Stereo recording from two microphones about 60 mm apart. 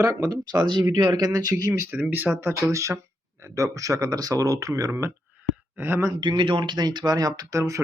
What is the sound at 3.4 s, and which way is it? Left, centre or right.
Speech, right.